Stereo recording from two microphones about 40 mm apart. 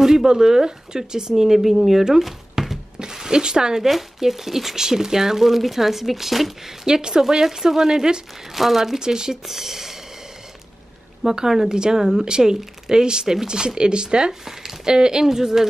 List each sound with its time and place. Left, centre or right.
0.0 s speech: centre
2.0 s a sound: centre
3.0 s speech: centre
3.8 s speech: centre
6.9 s speech: centre
8.5 s speech: centre
11.2 s speech: centre